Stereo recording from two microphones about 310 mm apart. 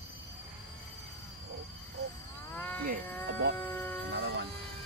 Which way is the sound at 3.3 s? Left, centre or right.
Right.